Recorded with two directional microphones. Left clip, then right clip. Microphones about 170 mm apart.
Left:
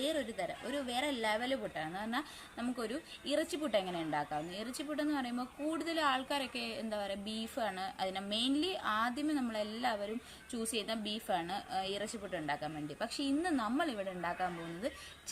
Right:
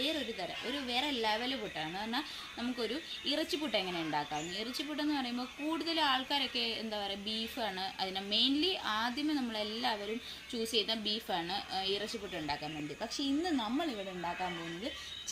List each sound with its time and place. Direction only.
0.0 s a woman's voice: 30° left (ahead or behind)
13.2 s speech: 10° left (ahead or behind)